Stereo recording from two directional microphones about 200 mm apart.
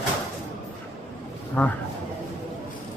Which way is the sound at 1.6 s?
15° left (ahead or behind).